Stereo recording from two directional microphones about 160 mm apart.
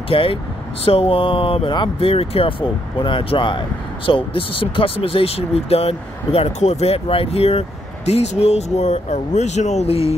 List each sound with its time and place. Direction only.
0.1 s speech: 35° left (ahead or behind)